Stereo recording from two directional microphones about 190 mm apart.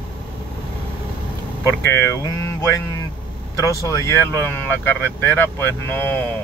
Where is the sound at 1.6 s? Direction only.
15° left (ahead or behind).